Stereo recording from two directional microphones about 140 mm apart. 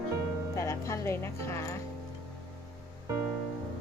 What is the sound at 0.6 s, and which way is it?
Music, 20° left (ahead or behind).